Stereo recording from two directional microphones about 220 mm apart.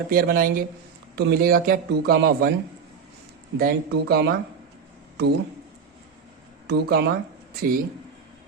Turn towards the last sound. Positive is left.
turn(degrees=-40)  # may be behind; listen again after turning